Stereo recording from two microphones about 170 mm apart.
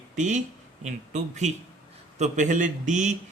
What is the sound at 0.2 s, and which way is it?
Speech, 45° right (ahead or behind).